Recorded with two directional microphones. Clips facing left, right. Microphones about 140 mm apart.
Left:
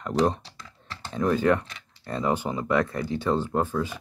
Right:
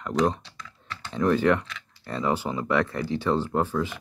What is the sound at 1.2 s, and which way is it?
Speech, 25° left (ahead or behind).